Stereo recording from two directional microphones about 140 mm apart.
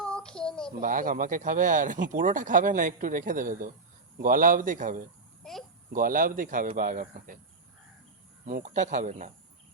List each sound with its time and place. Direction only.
0.0 s child singing: 5° left (ahead or behind)
0.8 s speech: 75° right (ahead or behind)
5.4 s a sound: centre (ahead or behind)
5.9 s speech: 85° right
8.4 s speech: 65° right (ahead or behind)